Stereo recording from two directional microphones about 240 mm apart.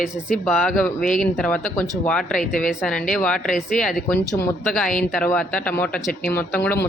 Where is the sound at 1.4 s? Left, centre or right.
Centre.